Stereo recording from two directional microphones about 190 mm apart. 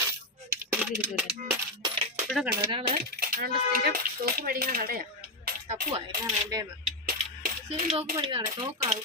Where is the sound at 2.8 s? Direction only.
50° right (ahead or behind).